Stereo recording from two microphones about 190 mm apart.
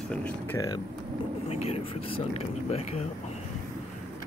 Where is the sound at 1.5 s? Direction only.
30° left (ahead or behind).